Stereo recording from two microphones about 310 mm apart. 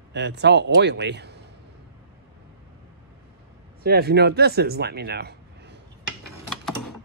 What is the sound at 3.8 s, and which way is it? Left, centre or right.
Speech, right.